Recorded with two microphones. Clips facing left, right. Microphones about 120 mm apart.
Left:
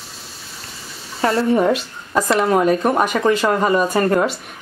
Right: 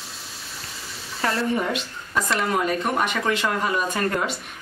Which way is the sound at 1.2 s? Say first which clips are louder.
Left 8 dB; 35° left (ahead or behind).